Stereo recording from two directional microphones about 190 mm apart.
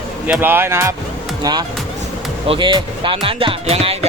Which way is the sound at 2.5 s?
25° right (ahead or behind).